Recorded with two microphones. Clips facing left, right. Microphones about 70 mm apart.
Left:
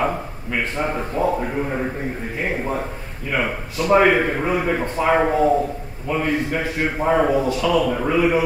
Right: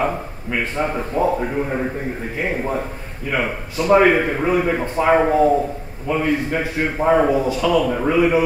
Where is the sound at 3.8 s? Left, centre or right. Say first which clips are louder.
Right 1 dB; centre.